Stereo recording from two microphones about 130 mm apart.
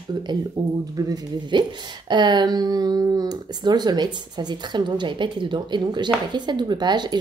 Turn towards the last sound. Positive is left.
turn(degrees=-35)  # may be behind; listen again after turning